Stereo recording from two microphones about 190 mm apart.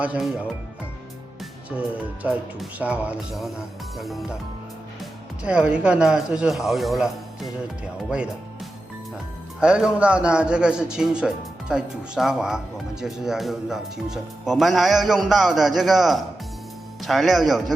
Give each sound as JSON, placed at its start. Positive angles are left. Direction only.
{"t": 0.0, "sound": "speech", "side_deg": -5}
{"t": 1.7, "sound": "speech", "side_deg": -5}
{"t": 5.4, "sound": "speech", "side_deg": -5}
{"t": 9.6, "sound": "speech", "side_deg": -5}